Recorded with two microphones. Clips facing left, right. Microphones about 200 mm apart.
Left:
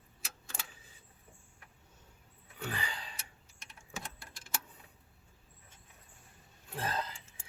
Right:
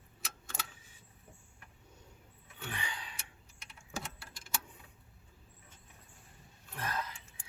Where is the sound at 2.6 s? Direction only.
35° left (ahead or behind).